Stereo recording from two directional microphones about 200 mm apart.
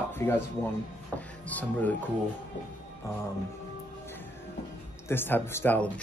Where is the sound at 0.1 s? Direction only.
10° left (ahead or behind).